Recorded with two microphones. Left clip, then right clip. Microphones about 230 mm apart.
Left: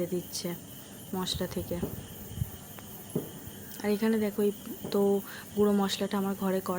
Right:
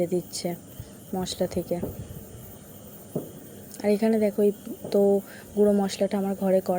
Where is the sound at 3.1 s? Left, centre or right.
Left.